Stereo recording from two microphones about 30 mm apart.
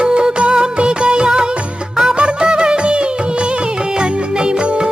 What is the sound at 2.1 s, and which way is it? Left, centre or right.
Music, right.